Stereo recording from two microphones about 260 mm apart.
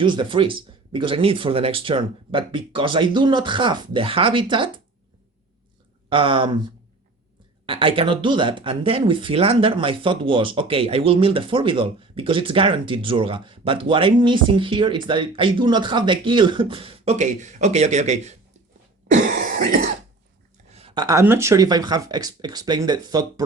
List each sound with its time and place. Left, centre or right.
0.0 s speech: centre
6.1 s speech: centre
7.7 s speech: centre
20.7 s speech: right